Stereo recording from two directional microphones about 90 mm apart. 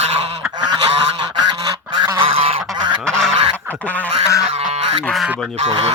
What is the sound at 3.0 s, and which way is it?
Goose, 5° left (ahead or behind).